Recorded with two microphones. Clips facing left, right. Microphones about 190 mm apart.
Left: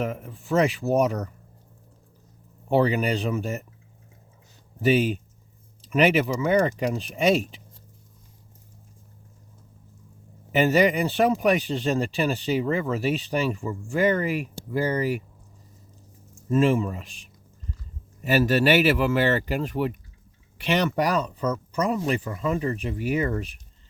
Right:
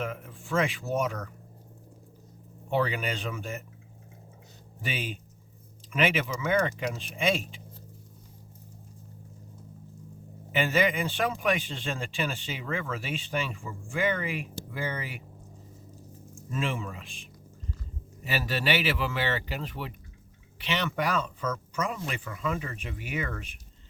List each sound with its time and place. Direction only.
0.0 s speech: 40° left (ahead or behind)
2.6 s speech: 35° left (ahead or behind)
4.8 s speech: 40° left (ahead or behind)
10.5 s speech: 40° left (ahead or behind)
16.5 s speech: 40° left (ahead or behind)